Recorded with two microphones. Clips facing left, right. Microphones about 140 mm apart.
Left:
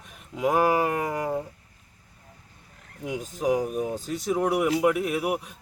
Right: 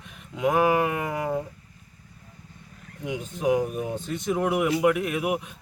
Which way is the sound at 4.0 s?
40° left (ahead or behind).